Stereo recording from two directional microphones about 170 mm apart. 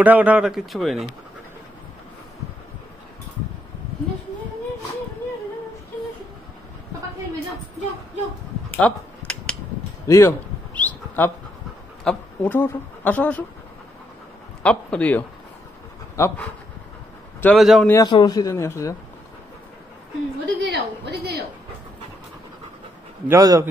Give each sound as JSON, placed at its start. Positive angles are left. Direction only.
{"t": 0.0, "sound": "speech", "side_deg": -10}
{"t": 8.7, "sound": "a sound", "side_deg": 10}
{"t": 10.0, "sound": "a sound", "side_deg": 15}
{"t": 12.0, "sound": "speech", "side_deg": 5}
{"t": 14.6, "sound": "a man's voice", "side_deg": 5}
{"t": 17.4, "sound": "speech", "side_deg": 5}
{"t": 17.8, "sound": "a man's voice", "side_deg": 15}
{"t": 20.6, "sound": "a woman's voice", "side_deg": -85}
{"t": 23.2, "sound": "speech", "side_deg": -20}